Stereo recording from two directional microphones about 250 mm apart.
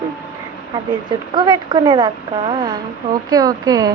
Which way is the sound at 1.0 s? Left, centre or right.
Centre.